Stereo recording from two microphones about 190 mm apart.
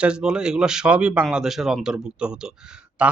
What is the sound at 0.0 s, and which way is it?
Speech, 5° right (ahead or behind).